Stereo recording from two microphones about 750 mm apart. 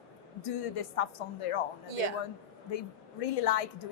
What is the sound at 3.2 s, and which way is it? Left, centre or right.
Speech, left.